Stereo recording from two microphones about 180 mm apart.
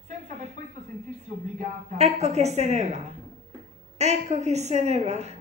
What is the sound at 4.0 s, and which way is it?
A woman's voice, 40° right (ahead or behind).